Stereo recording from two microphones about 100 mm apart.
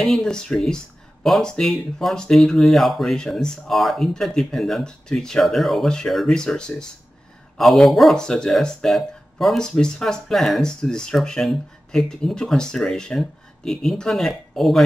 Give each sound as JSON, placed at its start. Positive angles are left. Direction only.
{"t": 0.0, "sound": "speech", "side_deg": 5}